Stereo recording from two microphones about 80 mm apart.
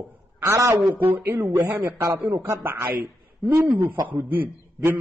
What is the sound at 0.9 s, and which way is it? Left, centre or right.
A man's voice, right.